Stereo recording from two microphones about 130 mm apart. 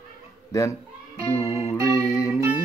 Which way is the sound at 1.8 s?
25° left (ahead or behind).